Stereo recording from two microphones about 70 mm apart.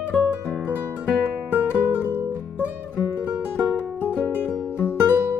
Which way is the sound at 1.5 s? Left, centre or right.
Right.